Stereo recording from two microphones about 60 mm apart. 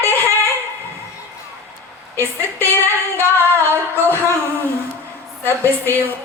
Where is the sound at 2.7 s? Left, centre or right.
Left.